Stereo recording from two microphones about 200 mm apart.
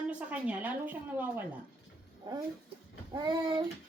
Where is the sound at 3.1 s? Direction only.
20° right (ahead or behind).